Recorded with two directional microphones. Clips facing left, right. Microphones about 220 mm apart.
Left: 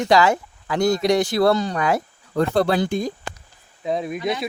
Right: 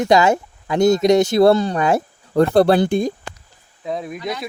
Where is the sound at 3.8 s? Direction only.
Centre (ahead or behind).